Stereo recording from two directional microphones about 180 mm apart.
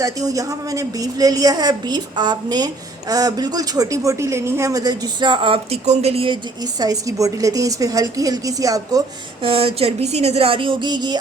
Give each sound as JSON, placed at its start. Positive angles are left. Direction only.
{"t": 0.0, "sound": "speech", "side_deg": -20}
{"t": 6.7, "sound": "speech", "side_deg": -20}
{"t": 9.4, "sound": "speech", "side_deg": -30}